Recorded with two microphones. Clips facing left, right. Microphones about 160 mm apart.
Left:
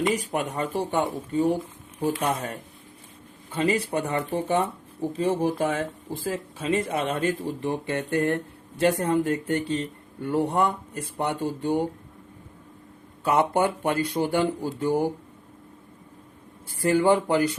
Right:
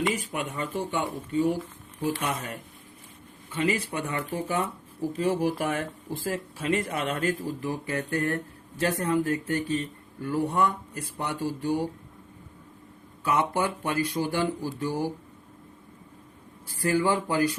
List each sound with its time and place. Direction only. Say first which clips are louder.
0.3 s speech: left 4 dB; 40° left (ahead or behind)
13.2 s speech: left 4 dB; 30° left (ahead or behind)
16.6 s speech: left 4 dB; 25° left (ahead or behind)